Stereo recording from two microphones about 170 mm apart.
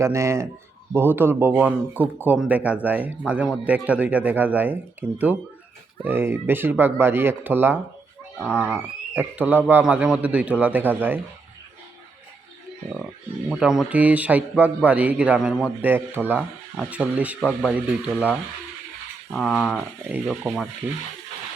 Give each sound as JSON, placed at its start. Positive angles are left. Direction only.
{"t": 0.0, "sound": "speech", "side_deg": -15}
{"t": 8.4, "sound": "speech", "side_deg": 10}
{"t": 9.1, "sound": "speech", "side_deg": -10}
{"t": 13.5, "sound": "speech", "side_deg": -5}
{"t": 19.3, "sound": "speech", "side_deg": 5}
{"t": 20.1, "sound": "speech", "side_deg": -5}